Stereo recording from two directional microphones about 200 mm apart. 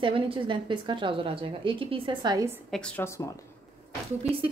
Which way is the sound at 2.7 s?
5° left (ahead or behind).